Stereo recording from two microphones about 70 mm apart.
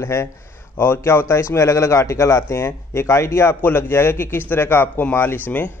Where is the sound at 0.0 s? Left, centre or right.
Left.